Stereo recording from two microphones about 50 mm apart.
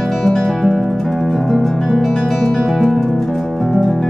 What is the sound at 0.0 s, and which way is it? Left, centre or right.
Music, centre.